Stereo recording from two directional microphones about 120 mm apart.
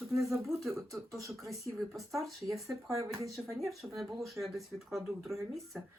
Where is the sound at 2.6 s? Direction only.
25° right (ahead or behind).